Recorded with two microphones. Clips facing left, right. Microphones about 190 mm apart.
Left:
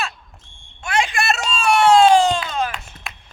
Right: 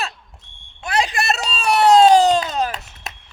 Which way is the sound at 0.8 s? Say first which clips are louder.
Even; 35° right (ahead or behind).